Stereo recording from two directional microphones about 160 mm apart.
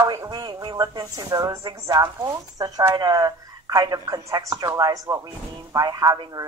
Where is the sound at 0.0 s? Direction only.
25° right (ahead or behind).